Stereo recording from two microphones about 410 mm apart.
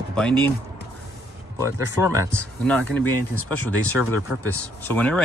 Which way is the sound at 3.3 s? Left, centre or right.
Left.